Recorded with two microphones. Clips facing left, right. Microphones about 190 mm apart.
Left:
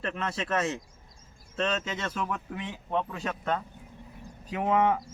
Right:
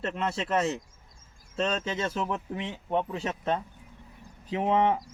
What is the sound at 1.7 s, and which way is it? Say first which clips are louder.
Speech: right 2 dB; 30° right (ahead or behind).